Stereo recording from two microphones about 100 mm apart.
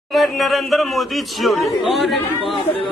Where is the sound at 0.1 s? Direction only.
Centre (ahead or behind).